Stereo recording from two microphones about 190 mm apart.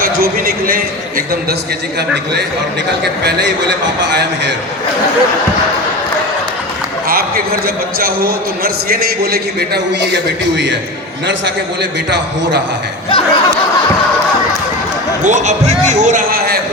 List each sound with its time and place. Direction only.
0.0 s a man's voice: 50° right (ahead or behind)
3.0 s a man's voice: 60° right (ahead or behind)
7.1 s a man's voice: 50° right (ahead or behind)
11.3 s a man's voice: 65° right (ahead or behind)
13.1 s speech: 25° left (ahead or behind)
15.2 s a man's voice: 40° right (ahead or behind)